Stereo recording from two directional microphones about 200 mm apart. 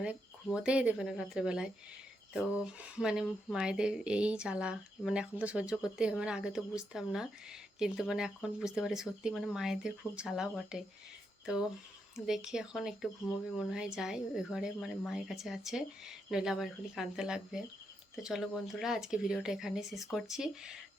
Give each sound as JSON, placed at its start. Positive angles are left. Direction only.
{"t": 0.0, "sound": "speech", "side_deg": -5}
{"t": 12.1, "sound": "speech", "side_deg": 0}